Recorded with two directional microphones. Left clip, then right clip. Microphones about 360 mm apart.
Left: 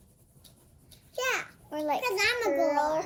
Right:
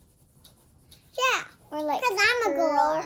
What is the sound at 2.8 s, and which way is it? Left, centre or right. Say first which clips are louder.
Speech: right 4 dB; centre.